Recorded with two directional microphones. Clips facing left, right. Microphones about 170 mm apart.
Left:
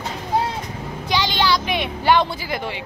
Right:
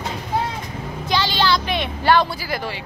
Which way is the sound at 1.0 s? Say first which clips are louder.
Even; 15° left (ahead or behind).